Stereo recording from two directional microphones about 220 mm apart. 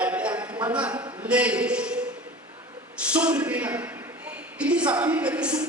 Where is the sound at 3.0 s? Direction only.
5° right (ahead or behind).